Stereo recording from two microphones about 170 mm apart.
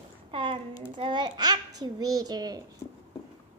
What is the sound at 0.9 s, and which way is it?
A child's voice, 25° right (ahead or behind).